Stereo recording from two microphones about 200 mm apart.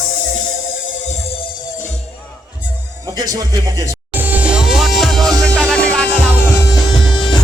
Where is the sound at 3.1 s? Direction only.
20° right (ahead or behind).